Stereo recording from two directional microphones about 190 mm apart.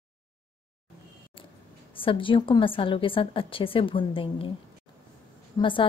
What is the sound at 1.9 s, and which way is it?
A woman's voice, 25° left (ahead or behind).